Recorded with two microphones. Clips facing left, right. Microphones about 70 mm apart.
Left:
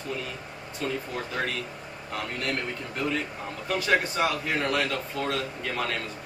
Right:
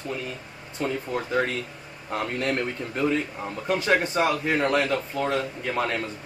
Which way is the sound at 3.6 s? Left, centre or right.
Right.